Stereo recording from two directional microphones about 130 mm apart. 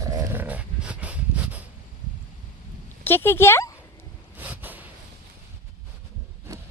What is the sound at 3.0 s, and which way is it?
Speech, 15° left (ahead or behind).